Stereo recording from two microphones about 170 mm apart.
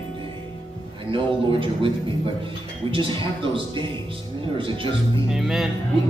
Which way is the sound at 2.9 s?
30° right (ahead or behind).